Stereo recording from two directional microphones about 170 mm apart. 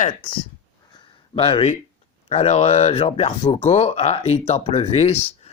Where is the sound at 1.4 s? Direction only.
35° left (ahead or behind).